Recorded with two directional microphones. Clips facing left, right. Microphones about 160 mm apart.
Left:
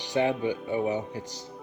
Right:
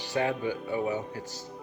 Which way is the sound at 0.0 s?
20° left (ahead or behind).